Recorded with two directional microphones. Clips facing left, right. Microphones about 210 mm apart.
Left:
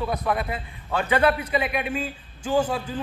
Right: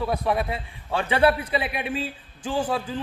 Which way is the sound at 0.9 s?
30° right (ahead or behind).